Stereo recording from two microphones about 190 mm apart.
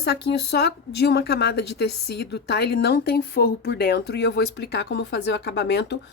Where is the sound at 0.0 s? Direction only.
60° left (ahead or behind).